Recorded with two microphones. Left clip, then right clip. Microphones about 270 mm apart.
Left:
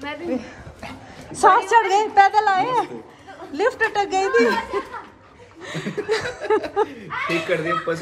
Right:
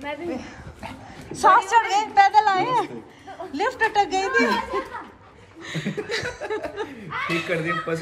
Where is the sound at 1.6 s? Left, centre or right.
Centre.